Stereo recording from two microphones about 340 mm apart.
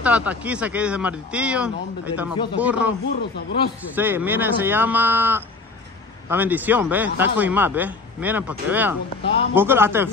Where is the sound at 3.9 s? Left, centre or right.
Centre.